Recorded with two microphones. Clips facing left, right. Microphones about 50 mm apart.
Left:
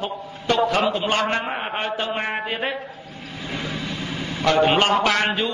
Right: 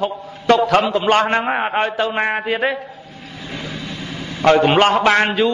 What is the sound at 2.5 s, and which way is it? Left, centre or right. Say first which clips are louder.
Speech: right 7 dB; right.